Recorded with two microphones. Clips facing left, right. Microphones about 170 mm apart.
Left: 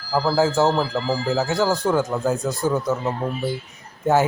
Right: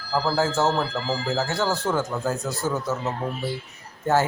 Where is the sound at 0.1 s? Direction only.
15° left (ahead or behind).